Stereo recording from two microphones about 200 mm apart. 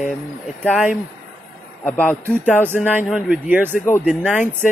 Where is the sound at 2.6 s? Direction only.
10° right (ahead or behind).